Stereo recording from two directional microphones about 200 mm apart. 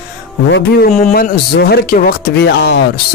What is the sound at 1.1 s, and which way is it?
Speech, 50° left (ahead or behind).